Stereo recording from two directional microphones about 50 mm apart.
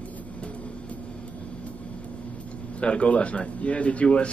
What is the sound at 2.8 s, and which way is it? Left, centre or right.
A man's voice, left.